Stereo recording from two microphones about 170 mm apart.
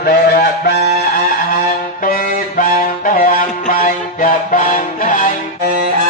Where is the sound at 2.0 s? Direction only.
55° left (ahead or behind).